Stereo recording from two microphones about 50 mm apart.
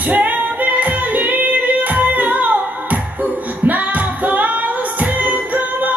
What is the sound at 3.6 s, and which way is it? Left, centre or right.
Music, right.